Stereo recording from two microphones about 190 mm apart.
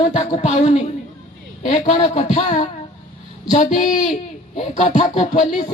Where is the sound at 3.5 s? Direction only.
45° left (ahead or behind).